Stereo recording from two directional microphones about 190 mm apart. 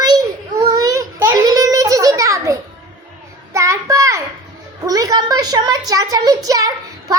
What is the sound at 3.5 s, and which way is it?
Child singing, 15° right (ahead or behind).